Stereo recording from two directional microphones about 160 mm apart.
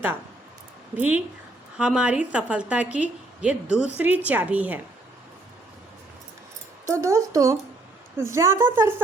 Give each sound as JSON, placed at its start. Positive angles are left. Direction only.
{"t": 0.9, "sound": "a woman's voice", "side_deg": -10}
{"t": 6.8, "sound": "a woman's voice", "side_deg": -20}